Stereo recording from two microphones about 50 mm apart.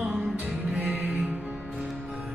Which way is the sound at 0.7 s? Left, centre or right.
Right.